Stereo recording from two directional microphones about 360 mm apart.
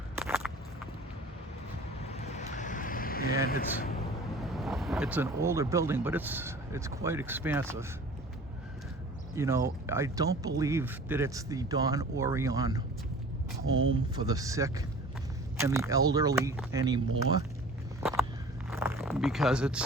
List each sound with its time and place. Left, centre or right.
0.2 s a sound: centre
2.0 s vehicle: centre
4.6 s speech: centre
9.3 s speech: centre
14.3 s speech: centre
18.0 s walk: centre
18.7 s zipper: centre